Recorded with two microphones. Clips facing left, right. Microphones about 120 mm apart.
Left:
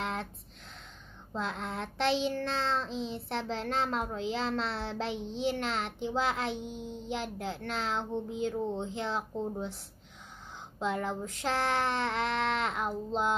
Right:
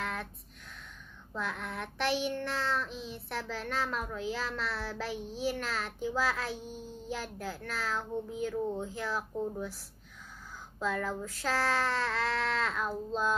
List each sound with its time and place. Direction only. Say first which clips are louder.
0.0 s a sound: left 2 dB; 25° left (ahead or behind)
1.3 s child singing: left 2 dB; 25° left (ahead or behind)
10.8 s child singing: left 1 dB; 20° left (ahead or behind)